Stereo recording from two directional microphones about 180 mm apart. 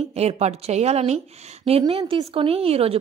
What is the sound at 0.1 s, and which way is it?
A woman's voice, 35° right (ahead or behind).